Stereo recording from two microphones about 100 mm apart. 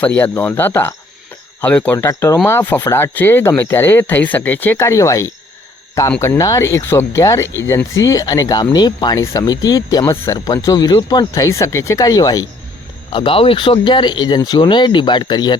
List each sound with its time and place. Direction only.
0.0 s speech: 15° left (ahead or behind); by 9.1 s 45° left (ahead or behind)
9.1 s speech: 30° left (ahead or behind)
13.1 s speech: 60° left (ahead or behind)